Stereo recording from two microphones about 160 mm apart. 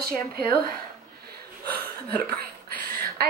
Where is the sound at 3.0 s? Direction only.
75° right (ahead or behind).